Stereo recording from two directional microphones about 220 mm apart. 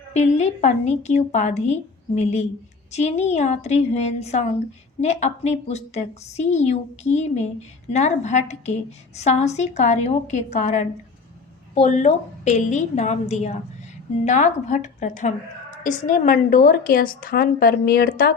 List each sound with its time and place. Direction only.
0.1 s a woman's voice: 30° left (ahead or behind)